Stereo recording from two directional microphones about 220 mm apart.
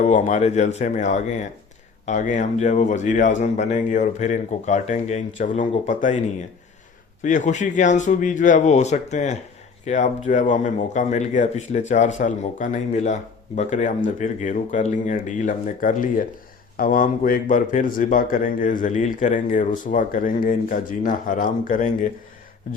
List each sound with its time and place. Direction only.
0.0 s speech: 35° left (ahead or behind)